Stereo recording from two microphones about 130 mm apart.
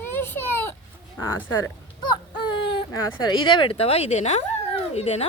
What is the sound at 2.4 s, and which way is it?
Speech, 40° left (ahead or behind).